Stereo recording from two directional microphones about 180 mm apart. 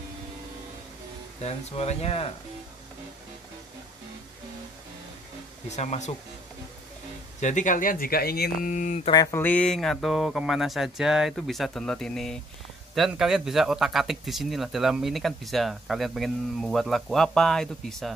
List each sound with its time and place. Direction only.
1.4 s speech: 35° left (ahead or behind)
5.7 s speech: 40° left (ahead or behind)
7.3 s speech: 40° left (ahead or behind)
9.1 s a sound: 20° left (ahead or behind)
9.4 s speech: 10° left (ahead or behind)